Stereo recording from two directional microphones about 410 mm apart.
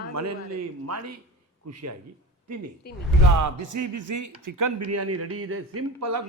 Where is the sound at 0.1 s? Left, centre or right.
Right.